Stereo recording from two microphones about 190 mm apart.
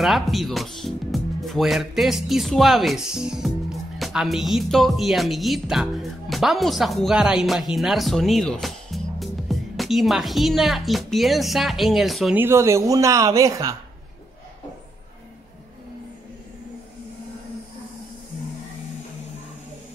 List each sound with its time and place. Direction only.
0.0 s speech: centre (ahead or behind)
12.4 s speech: 15° right (ahead or behind)